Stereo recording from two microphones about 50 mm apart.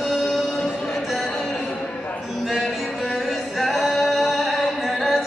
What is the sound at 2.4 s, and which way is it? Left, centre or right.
Singing, centre.